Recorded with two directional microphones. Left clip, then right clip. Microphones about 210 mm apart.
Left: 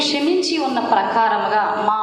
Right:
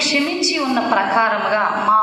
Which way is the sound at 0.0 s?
50° left (ahead or behind).